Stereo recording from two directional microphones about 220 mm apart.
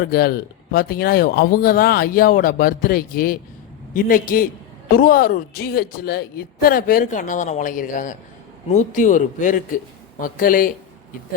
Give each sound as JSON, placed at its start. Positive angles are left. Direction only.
{"t": 0.1, "sound": "speech", "side_deg": 45}